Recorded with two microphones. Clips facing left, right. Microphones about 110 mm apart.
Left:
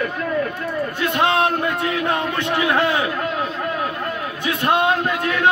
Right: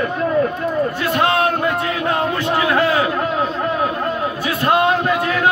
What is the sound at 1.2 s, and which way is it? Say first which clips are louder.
Speech: right 1 dB; 25° left (ahead or behind).